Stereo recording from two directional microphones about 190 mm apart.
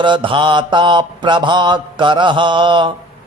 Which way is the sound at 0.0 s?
25° right (ahead or behind).